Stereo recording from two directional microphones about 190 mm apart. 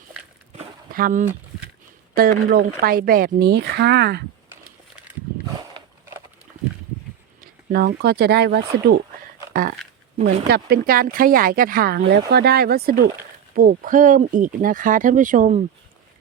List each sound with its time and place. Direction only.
0.9 s speech: 50° right (ahead or behind)
7.4 s speech: 55° right (ahead or behind)
9.5 s a sound: 50° right (ahead or behind)
10.2 s speech: 55° right (ahead or behind); by 15.6 s 40° right (ahead or behind)